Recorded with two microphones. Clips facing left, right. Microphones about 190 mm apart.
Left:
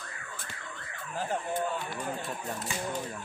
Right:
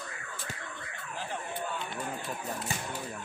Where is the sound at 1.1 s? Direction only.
45° left (ahead or behind).